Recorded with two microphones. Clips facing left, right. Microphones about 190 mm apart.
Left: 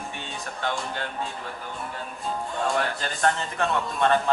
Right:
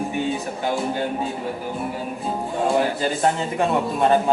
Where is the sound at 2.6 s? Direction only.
20° right (ahead or behind).